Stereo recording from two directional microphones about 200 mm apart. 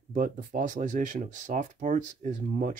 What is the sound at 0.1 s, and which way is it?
Speech, 40° right (ahead or behind).